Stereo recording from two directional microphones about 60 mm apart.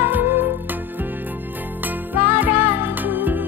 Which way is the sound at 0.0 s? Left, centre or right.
Right.